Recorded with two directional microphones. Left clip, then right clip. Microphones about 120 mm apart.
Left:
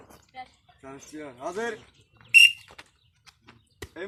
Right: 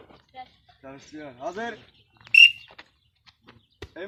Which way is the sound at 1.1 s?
25° right (ahead or behind).